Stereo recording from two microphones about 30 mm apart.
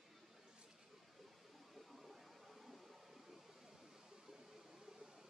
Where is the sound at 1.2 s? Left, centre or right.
Centre.